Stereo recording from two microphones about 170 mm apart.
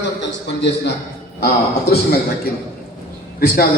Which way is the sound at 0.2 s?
90° left.